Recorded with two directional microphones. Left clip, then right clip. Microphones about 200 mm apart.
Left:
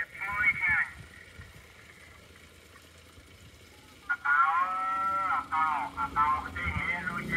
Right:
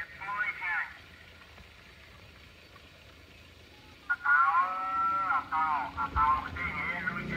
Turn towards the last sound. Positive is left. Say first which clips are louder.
# left 1 dB
turn(degrees=30)  # may be behind; listen again after turning